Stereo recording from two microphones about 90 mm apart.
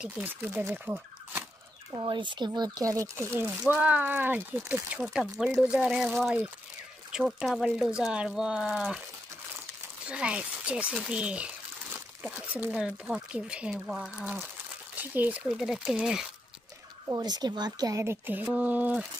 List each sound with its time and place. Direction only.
0.0 s speech: 15° right (ahead or behind)
2.0 s speech: 65° right (ahead or behind); by 5.0 s 20° right (ahead or behind)
5.0 s speech: 5° right (ahead or behind)
10.0 s speech: 10° right (ahead or behind)
15.4 s speech: 5° right (ahead or behind)
17.1 s speech: 50° right (ahead or behind)
17.9 s speech: 30° right (ahead or behind)